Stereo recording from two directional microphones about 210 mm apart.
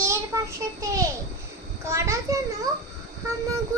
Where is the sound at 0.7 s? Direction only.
15° right (ahead or behind).